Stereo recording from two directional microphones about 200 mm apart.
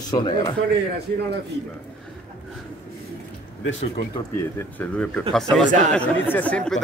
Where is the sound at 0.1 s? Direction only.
20° left (ahead or behind).